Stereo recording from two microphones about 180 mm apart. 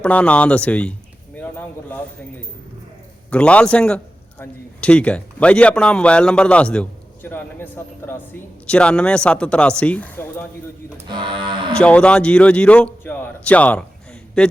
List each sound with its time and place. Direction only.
0.0 s speech: 5° left (ahead or behind)
3.2 s a man's voice: 5° left (ahead or behind)
10.9 s speech: 25° right (ahead or behind)
11.7 s a man's voice: 5° left (ahead or behind)